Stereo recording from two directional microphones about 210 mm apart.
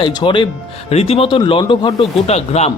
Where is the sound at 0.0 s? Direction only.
20° left (ahead or behind).